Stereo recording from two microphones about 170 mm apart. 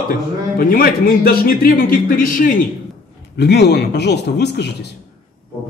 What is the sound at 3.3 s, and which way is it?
A man's voice, 75° left (ahead or behind).